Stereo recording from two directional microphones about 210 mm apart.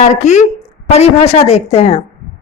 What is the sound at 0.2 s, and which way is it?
Speech, 35° left (ahead or behind).